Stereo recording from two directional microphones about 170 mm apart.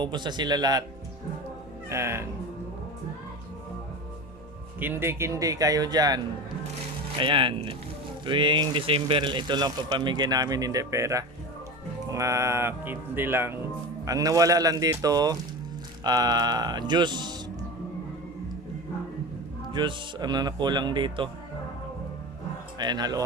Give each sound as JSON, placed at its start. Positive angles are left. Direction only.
{"t": 0.0, "sound": "speech", "side_deg": -25}
{"t": 1.9, "sound": "speech", "side_deg": -15}
{"t": 4.8, "sound": "speech", "side_deg": -10}
{"t": 19.7, "sound": "speech", "side_deg": -25}
{"t": 22.8, "sound": "speech", "side_deg": -25}